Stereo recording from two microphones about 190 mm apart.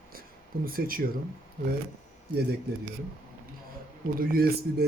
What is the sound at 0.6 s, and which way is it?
Speech, 50° right (ahead or behind).